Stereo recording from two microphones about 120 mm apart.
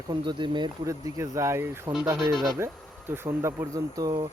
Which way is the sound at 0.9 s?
25° right (ahead or behind).